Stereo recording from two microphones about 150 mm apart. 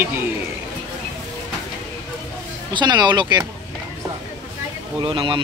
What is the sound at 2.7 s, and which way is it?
Speech, 30° right (ahead or behind).